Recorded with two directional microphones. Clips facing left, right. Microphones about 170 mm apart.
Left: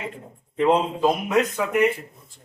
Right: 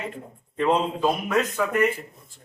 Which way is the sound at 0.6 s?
15° left (ahead or behind).